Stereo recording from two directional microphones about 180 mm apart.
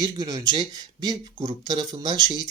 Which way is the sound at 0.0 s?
20° right (ahead or behind).